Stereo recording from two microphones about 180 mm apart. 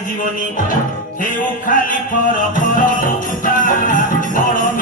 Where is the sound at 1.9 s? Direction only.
50° left (ahead or behind).